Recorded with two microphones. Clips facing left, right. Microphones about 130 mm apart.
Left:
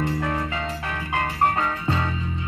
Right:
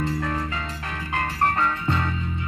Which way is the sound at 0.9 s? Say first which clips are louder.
Even; 15° left (ahead or behind).